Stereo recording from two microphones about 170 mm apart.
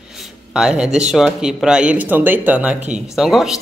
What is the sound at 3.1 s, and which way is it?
Speech, centre (ahead or behind).